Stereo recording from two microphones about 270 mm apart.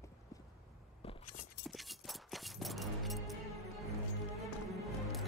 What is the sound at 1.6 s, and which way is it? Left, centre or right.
Music, centre.